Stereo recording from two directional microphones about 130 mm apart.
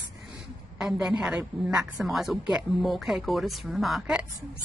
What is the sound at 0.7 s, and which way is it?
A woman's voice, 5° right (ahead or behind).